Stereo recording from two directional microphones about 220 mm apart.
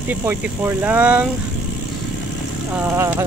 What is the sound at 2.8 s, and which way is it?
Speech, 10° right (ahead or behind).